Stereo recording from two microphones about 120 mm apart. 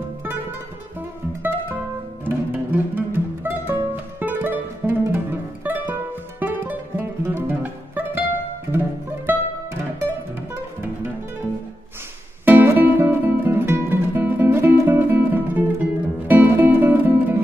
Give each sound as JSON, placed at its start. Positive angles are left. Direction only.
{"t": 2.2, "sound": "music", "side_deg": -15}
{"t": 12.4, "sound": "music", "side_deg": -15}